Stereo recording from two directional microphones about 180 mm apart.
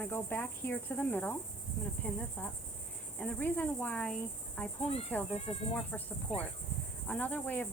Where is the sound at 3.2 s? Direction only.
10° left (ahead or behind).